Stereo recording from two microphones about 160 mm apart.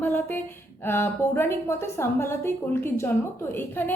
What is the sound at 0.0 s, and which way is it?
A woman's voice, 10° left (ahead or behind).